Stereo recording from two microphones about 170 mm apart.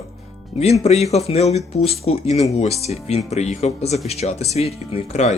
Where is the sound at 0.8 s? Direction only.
40° left (ahead or behind).